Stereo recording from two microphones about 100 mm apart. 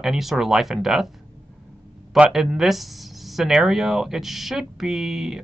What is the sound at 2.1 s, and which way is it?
Speech, 5° right (ahead or behind).